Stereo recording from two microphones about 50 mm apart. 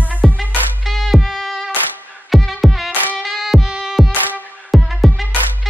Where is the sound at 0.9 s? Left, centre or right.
Centre.